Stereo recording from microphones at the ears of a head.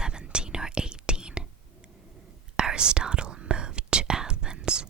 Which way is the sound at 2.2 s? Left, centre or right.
Right.